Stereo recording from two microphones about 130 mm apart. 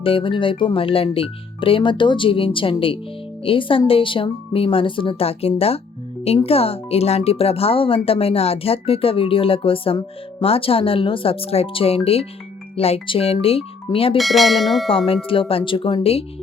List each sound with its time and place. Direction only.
0.0 s speech: 45° left (ahead or behind)
14.2 s speech: centre (ahead or behind)
14.8 s speech: 45° left (ahead or behind)